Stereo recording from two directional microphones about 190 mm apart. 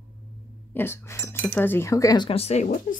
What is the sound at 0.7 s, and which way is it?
Speech, 10° left (ahead or behind).